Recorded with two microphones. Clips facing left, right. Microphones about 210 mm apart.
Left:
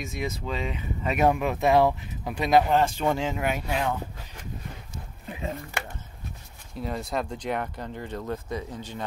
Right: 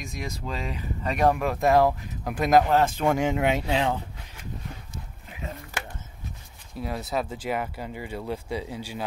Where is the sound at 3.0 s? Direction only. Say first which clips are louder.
Right 3 dB; 15° right (ahead or behind).